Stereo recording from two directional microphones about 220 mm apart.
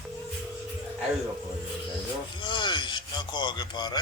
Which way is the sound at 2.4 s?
20° left (ahead or behind).